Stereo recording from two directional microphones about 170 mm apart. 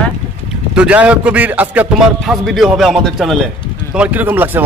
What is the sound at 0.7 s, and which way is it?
A man's voice, 5° right (ahead or behind).